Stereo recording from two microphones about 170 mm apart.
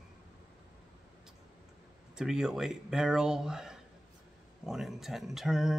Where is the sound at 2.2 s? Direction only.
5° right (ahead or behind).